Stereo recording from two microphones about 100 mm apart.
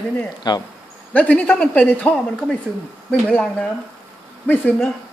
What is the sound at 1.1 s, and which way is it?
Speech, 15° left (ahead or behind).